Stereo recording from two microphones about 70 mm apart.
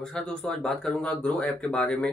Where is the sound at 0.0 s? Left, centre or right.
Centre.